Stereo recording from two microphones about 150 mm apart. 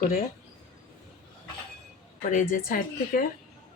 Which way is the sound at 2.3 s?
60° left (ahead or behind).